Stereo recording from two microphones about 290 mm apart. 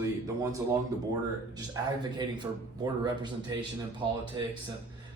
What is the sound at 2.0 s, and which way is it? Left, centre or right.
Speech, centre.